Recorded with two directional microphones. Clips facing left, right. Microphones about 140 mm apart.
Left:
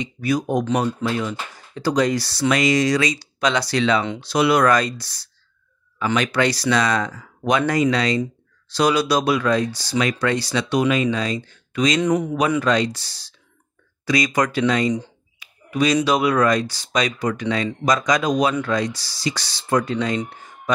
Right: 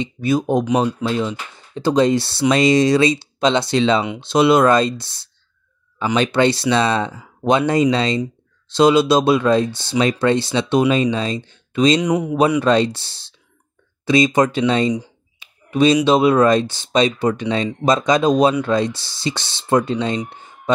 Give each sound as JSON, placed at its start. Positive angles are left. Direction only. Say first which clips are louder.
{"t": 0.0, "sound": "speech", "louder": "right 3 dB", "side_deg": -25}
{"t": 12.0, "sound": "speech", "louder": "right 1 dB", "side_deg": -10}
{"t": 12.4, "sound": "speech", "louder": "right 4 dB", "side_deg": -30}
{"t": 20.2, "sound": "a sound", "louder": "right 4 dB", "side_deg": -25}